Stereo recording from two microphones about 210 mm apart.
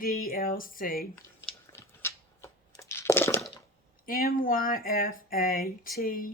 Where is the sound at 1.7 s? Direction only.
10° left (ahead or behind).